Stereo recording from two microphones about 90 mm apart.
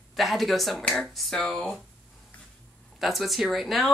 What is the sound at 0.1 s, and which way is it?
Speech, centre (ahead or behind).